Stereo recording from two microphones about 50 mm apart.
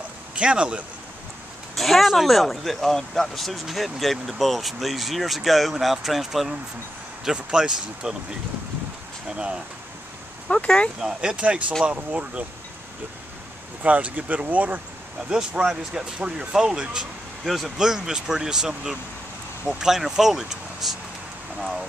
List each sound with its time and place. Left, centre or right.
0.4 s speech: right
1.8 s speech: centre
7.3 s speech: centre
10.5 s speech: left
11.0 s speech: centre
11.3 s speech: right
13.8 s speech: right
15.2 s speech: centre
17.5 s speech: centre
21.5 s speech: centre